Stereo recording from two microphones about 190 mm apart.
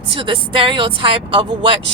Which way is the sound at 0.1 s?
25° right (ahead or behind).